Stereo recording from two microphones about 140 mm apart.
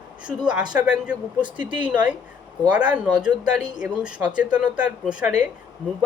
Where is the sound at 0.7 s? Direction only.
5° right (ahead or behind).